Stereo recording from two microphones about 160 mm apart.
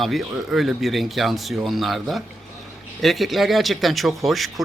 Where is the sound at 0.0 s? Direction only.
Centre (ahead or behind).